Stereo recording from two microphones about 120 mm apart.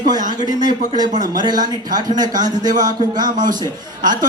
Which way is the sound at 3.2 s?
90° right.